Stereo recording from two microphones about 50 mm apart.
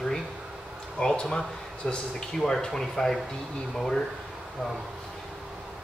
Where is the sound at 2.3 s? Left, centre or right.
Centre.